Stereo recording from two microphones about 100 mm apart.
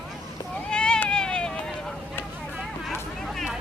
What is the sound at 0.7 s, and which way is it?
Cat, 10° left (ahead or behind).